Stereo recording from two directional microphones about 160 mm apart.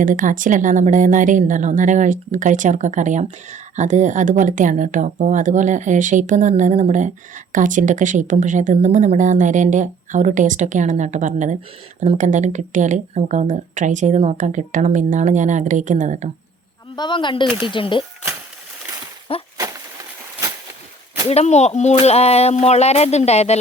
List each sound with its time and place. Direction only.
0.0 s a woman's voice: 55° right (ahead or behind)
16.9 s speech: 30° left (ahead or behind)
19.3 s speech: 35° left (ahead or behind)
21.2 s speech: 45° left (ahead or behind)